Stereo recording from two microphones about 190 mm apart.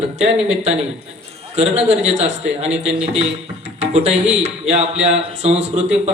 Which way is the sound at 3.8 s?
35° right (ahead or behind).